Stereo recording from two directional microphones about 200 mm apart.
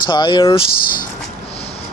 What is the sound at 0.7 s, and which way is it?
Speech, 45° left (ahead or behind).